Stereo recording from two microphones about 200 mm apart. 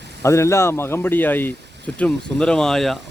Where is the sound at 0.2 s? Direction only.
15° left (ahead or behind).